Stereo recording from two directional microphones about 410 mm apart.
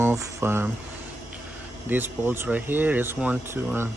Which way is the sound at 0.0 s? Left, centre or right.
Centre.